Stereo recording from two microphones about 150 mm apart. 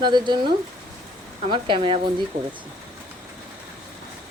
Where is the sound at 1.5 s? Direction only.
35° right (ahead or behind).